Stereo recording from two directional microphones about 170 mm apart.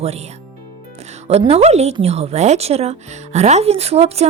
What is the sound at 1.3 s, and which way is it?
Speech, 35° right (ahead or behind).